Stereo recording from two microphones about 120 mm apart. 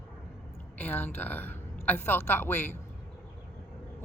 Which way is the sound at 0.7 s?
15° left (ahead or behind).